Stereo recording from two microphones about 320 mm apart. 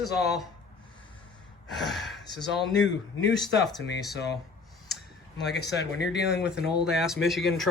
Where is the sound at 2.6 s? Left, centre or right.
Left.